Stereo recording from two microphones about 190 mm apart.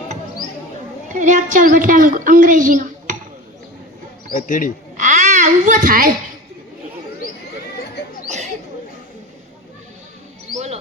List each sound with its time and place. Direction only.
1.0 s a woman's voice: 40° right (ahead or behind)
4.3 s a man's voice: 45° left (ahead or behind)
4.9 s a child's voice: 40° right (ahead or behind)